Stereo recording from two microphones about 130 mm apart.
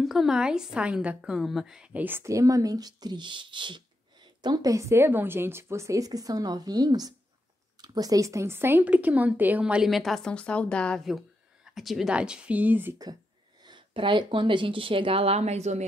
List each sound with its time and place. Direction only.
0.0 s a woman's voice: centre (ahead or behind)
11.1 s speech: centre (ahead or behind)
13.7 s speech: 40° right (ahead or behind); by 15.8 s 60° right (ahead or behind)